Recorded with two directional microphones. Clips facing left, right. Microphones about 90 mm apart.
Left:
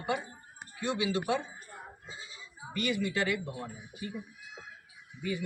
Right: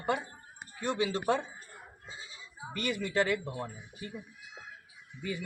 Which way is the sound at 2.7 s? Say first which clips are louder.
Right 1 dB; 40° right (ahead or behind).